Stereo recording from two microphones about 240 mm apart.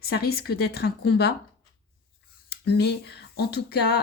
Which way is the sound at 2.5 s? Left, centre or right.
Left.